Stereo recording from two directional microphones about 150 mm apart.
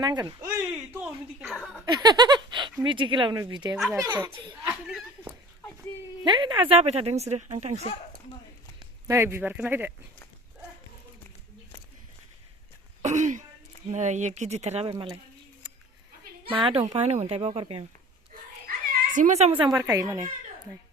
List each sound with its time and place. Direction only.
0.0 s speech: 30° right (ahead or behind)
0.4 s speech: 15° right (ahead or behind)
1.8 s speech: 30° right (ahead or behind)
6.2 s speech: 30° right (ahead or behind); by 7.8 s 50° right (ahead or behind)
8.8 s speech: 20° right (ahead or behind)
13.0 s throat clearing: 55° right (ahead or behind)
13.9 s speech: 50° right (ahead or behind)
16.5 s a woman's voice: 35° right (ahead or behind)
16.8 s speech: 45° right (ahead or behind)
19.1 s speech: 55° right (ahead or behind)
19.5 s speech: 25° right (ahead or behind)